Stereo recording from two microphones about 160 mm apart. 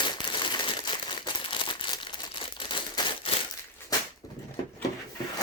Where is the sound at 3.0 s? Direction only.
30° left (ahead or behind).